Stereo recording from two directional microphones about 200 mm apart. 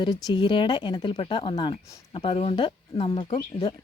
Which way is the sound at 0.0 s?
20° left (ahead or behind).